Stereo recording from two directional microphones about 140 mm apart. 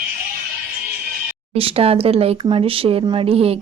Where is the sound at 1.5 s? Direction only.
45° right (ahead or behind).